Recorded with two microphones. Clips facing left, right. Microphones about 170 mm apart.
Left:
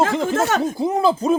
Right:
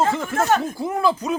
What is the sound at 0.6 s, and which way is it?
Speech, 20° left (ahead or behind).